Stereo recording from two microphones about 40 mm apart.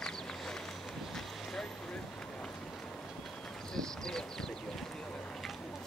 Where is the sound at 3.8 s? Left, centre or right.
Centre.